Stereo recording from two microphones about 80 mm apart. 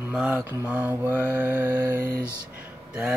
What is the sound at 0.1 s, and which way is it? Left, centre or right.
Mantra, centre.